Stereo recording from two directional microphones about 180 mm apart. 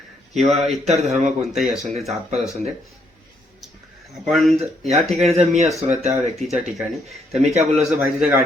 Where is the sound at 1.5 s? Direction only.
Centre (ahead or behind).